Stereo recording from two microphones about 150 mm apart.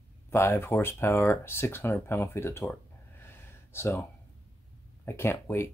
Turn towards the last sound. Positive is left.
turn(degrees=15)  # may be behind; listen again after turning